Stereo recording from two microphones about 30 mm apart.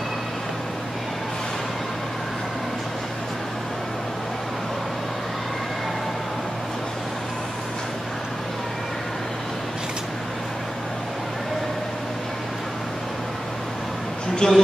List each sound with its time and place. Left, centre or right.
14.4 s speech: left